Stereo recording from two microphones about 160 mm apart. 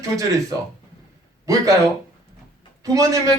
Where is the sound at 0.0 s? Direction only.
20° right (ahead or behind).